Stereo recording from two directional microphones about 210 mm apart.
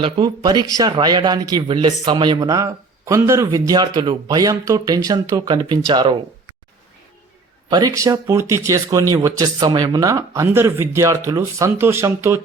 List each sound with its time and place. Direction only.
0.0 s a man's voice: 20° right (ahead or behind)
7.7 s speech: 15° right (ahead or behind)